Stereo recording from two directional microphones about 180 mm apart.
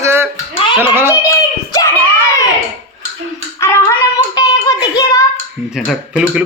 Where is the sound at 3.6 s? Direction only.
15° left (ahead or behind).